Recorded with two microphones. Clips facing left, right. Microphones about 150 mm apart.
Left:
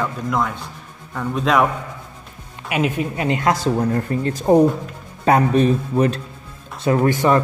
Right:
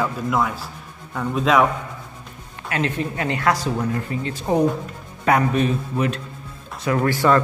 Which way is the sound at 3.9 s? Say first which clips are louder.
Left 5 dB; 45° left (ahead or behind).